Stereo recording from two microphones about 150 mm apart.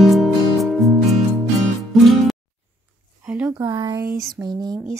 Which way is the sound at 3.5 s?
20° right (ahead or behind).